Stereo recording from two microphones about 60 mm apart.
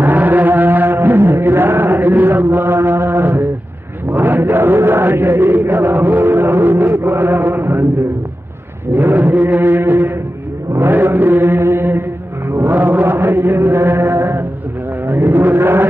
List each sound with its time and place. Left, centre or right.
0.0 s music: right
4.1 s mantra: right
8.9 s mantra: right
12.4 s chant: right
15.0 s a sound: right